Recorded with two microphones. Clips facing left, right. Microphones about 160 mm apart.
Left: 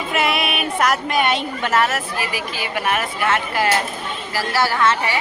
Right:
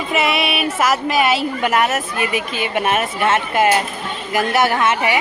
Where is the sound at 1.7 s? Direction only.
20° right (ahead or behind).